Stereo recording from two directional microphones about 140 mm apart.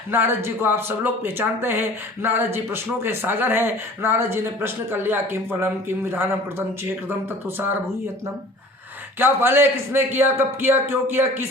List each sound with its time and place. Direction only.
0.1 s speech: 15° right (ahead or behind)
9.1 s speech: 15° right (ahead or behind)